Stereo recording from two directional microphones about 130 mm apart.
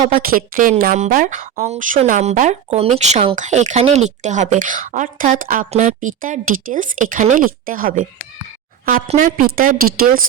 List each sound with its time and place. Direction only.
0.1 s a woman's voice: 90° right
9.0 s a woman's voice: 75° right (ahead or behind)